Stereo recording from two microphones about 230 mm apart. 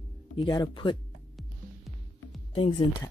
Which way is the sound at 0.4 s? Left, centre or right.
Centre.